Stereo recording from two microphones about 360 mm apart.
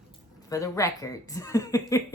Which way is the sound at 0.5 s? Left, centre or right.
Centre.